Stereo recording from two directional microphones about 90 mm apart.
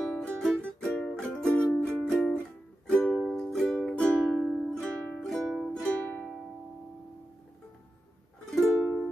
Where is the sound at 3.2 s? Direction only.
Centre (ahead or behind).